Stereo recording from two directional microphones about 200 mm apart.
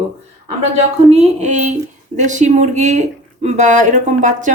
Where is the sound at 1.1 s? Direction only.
35° right (ahead or behind).